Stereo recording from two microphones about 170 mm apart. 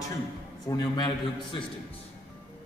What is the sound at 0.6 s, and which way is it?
Speech, 25° left (ahead or behind).